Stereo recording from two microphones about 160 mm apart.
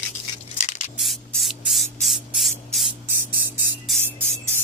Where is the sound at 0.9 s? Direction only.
Centre (ahead or behind).